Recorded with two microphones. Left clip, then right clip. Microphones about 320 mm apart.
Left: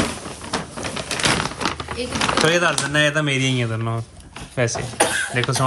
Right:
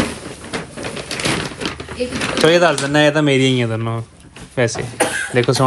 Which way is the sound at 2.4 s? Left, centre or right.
Centre.